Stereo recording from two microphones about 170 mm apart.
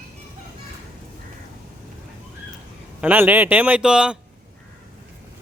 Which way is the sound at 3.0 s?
10° right (ahead or behind).